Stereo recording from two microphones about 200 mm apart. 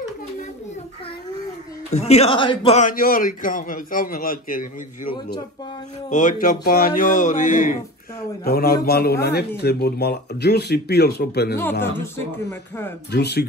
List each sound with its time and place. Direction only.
1.9 s a man's voice: 35° left (ahead or behind); by 11.5 s 55° left (ahead or behind)
11.8 s speech: 10° left (ahead or behind)
13.1 s speech: 55° left (ahead or behind)